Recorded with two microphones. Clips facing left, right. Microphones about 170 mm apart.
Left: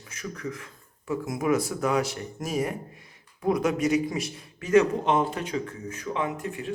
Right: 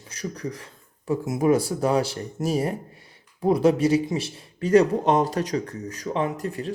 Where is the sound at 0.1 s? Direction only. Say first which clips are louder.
Right 3 dB; 35° right (ahead or behind).